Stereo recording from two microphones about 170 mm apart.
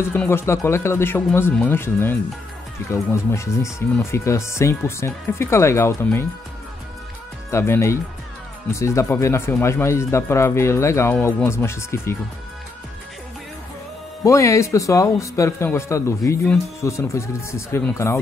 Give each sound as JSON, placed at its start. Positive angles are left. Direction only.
{"t": 0.0, "sound": "speech", "side_deg": 15}
{"t": 7.5, "sound": "speech", "side_deg": 15}
{"t": 14.2, "sound": "speech", "side_deg": 20}